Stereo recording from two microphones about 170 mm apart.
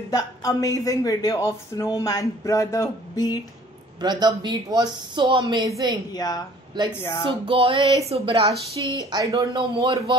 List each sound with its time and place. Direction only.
0.1 s speech: 20° left (ahead or behind)
4.0 s speech: 25° right (ahead or behind)
6.1 s speech: 25° left (ahead or behind)
7.4 s music: 30° right (ahead or behind)
8.5 s speech: 20° right (ahead or behind)